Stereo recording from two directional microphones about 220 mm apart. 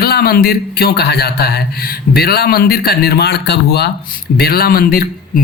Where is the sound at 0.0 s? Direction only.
45° left (ahead or behind).